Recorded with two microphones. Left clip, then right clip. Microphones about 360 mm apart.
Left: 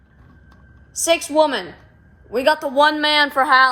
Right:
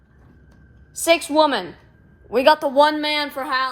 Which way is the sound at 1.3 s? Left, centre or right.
Centre.